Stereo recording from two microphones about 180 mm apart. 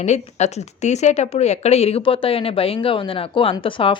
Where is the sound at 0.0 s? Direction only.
40° left (ahead or behind).